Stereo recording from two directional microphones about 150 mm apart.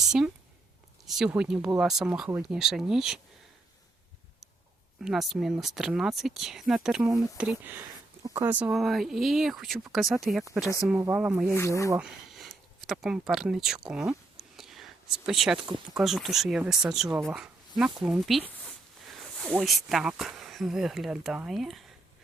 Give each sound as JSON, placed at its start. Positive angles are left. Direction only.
{"t": 1.0, "sound": "a sound", "side_deg": 0}
{"t": 1.3, "sound": "speech", "side_deg": -5}
{"t": 5.0, "sound": "speech", "side_deg": 0}
{"t": 11.5, "sound": "speech", "side_deg": 20}
{"t": 11.9, "sound": "speech", "side_deg": -5}
{"t": 14.3, "sound": "a sound", "side_deg": 0}
{"t": 16.0, "sound": "speech", "side_deg": 0}